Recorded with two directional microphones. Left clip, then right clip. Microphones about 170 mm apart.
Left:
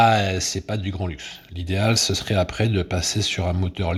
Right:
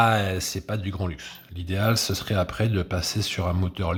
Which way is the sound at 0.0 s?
5° left (ahead or behind).